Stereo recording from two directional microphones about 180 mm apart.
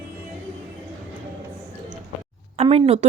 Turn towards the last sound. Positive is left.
turn(degrees=-35)  # may be behind; listen again after turning